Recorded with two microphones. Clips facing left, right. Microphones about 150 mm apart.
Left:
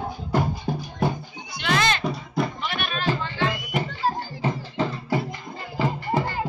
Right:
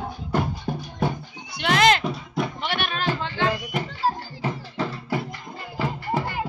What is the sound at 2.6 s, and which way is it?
Music, 75° right (ahead or behind).